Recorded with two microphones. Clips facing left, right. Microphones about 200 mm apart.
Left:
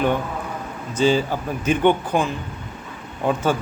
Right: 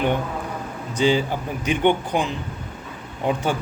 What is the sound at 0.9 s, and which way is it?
Speech, 15° right (ahead or behind).